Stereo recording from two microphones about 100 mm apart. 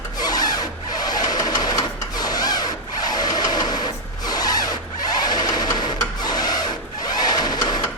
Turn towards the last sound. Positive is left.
turn(degrees=45)  # may be behind; listen again after turning